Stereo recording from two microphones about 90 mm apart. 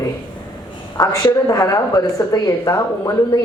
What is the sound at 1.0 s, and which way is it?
A woman's voice, 45° left (ahead or behind).